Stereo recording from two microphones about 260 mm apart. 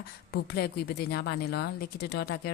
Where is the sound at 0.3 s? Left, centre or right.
Left.